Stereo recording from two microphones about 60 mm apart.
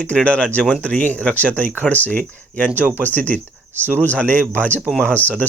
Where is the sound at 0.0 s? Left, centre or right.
Left.